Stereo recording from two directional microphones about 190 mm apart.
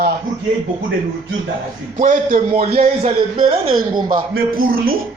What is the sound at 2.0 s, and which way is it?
A man's voice, 45° right (ahead or behind).